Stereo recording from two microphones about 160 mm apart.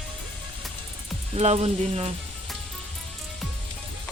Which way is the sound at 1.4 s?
40° right (ahead or behind).